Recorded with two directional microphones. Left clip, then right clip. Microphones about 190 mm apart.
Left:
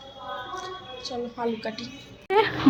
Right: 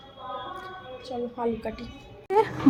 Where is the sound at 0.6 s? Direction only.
5° left (ahead or behind).